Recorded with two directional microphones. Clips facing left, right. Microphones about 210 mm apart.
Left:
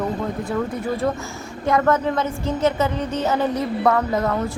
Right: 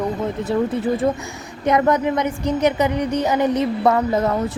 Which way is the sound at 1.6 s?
20° right (ahead or behind).